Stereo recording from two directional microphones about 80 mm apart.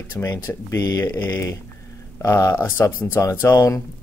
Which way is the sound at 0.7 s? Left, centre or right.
Left.